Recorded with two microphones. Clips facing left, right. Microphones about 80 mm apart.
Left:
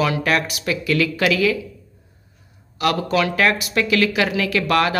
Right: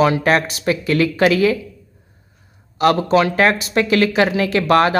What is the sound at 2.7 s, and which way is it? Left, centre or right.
Speech, right.